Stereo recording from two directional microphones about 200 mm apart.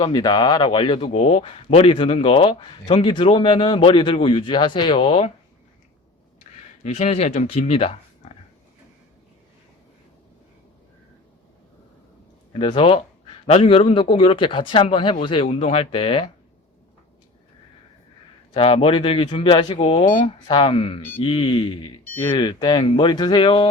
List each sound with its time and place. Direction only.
0.0 s speech: 20° left (ahead or behind)
6.5 s a sound: 35° left (ahead or behind)
6.8 s speech: 35° left (ahead or behind)
12.5 s speech: 25° left (ahead or behind)
18.5 s speech: 30° left (ahead or behind)